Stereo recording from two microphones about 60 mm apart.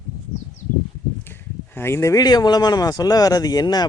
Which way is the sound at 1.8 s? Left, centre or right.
Left.